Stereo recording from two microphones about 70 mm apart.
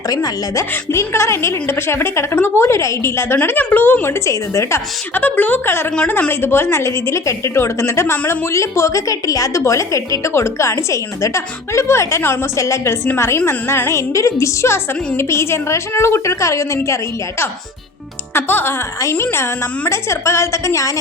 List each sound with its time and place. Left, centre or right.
0.1 s speech: left
0.9 s a woman's voice: left
3.3 s a woman's voice: left
5.1 s a woman's voice: left
18.3 s a woman's voice: left